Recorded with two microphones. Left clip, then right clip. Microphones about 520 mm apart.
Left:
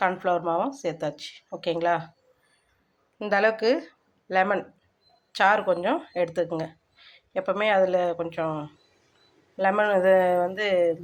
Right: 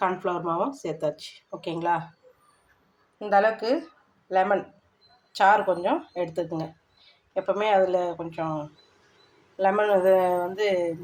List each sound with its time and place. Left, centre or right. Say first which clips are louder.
0.0 s speech: left 2 dB; left
3.2 s speech: right 1 dB; left